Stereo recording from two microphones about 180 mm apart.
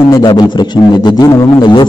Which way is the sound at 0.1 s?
25° left (ahead or behind).